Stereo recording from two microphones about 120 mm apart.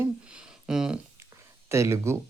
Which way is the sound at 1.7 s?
25° right (ahead or behind).